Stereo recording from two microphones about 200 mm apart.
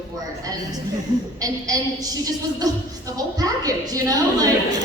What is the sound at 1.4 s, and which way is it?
A woman's voice, 20° right (ahead or behind).